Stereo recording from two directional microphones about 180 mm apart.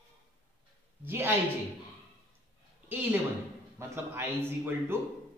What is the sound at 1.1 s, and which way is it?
Speech, 15° right (ahead or behind).